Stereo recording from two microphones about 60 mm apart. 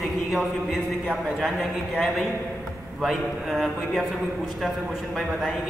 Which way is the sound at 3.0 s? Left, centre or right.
Centre.